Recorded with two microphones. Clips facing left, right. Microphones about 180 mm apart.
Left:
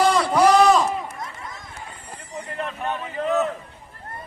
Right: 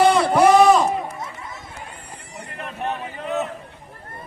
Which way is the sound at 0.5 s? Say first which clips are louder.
Right 3 dB; centre (ahead or behind).